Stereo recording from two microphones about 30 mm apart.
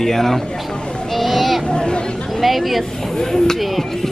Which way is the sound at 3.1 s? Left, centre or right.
Centre.